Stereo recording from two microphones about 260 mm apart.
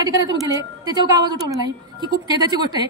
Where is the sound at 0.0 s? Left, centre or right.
Centre.